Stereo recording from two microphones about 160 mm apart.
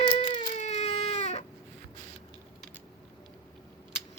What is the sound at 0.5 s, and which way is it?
Baby cry, 45° left (ahead or behind).